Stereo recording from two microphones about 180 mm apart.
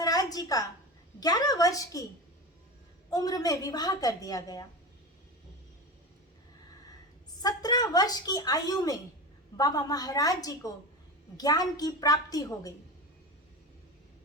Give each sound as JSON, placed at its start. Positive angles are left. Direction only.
{"t": 0.0, "sound": "a sound", "side_deg": 20}
{"t": 1.2, "sound": "a woman's voice", "side_deg": 20}
{"t": 3.1, "sound": "a woman's voice", "side_deg": 20}
{"t": 7.4, "sound": "a woman's voice", "side_deg": 20}